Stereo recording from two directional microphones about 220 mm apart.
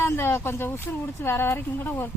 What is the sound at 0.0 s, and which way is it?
Speech, 10° left (ahead or behind).